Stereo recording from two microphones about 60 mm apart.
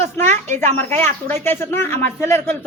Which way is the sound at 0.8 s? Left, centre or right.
Left.